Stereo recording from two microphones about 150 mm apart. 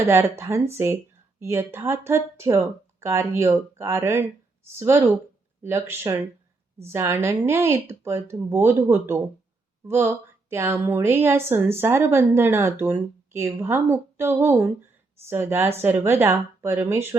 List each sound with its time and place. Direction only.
0.1 s a woman's voice: 15° right (ahead or behind)